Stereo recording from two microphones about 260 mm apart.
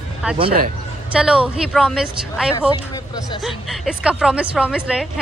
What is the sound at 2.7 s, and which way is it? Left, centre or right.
Speech, centre.